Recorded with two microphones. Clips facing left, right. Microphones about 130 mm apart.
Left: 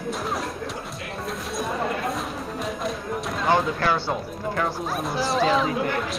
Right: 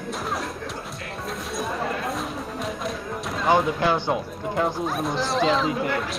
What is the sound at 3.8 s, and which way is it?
Speech, 15° right (ahead or behind).